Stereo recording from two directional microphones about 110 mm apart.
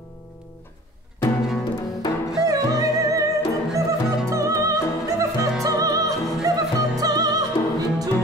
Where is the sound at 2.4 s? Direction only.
35° right (ahead or behind).